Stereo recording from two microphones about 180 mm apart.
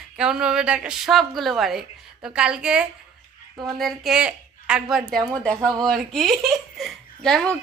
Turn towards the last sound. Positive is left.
turn(degrees=0)  # may be behind; listen again after turning